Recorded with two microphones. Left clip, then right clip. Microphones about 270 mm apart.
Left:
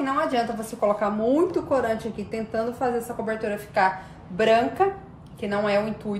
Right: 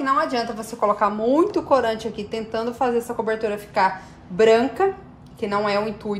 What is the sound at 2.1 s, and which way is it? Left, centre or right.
Speech, centre.